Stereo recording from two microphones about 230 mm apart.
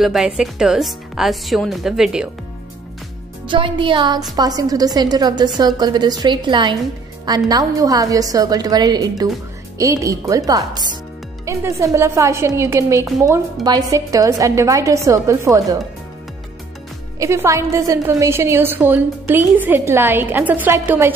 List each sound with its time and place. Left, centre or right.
0.0 s speech: centre
3.4 s a woman's voice: right
17.2 s a woman's voice: centre